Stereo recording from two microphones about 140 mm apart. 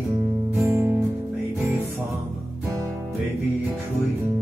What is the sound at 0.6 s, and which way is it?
Music, 20° right (ahead or behind).